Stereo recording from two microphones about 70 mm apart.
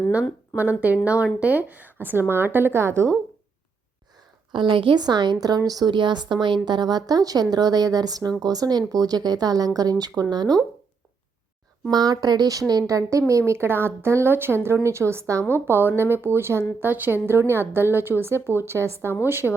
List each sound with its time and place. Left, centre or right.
0.5 s a woman's voice: right
4.9 s a woman's voice: right
10.0 s speech: right
11.9 s speech: right
15.6 s speech: right